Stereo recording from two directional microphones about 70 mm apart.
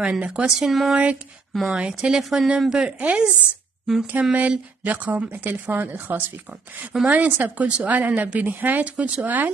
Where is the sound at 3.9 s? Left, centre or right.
Centre.